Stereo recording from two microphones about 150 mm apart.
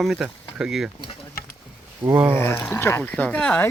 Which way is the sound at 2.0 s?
10° right (ahead or behind).